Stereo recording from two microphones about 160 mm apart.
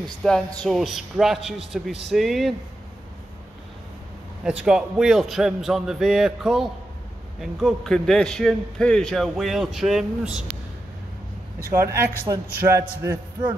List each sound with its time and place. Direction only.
0.0 s a man's voice: 5° left (ahead or behind)
4.5 s a man's voice: 5° right (ahead or behind)
11.7 s a man's voice: 15° right (ahead or behind)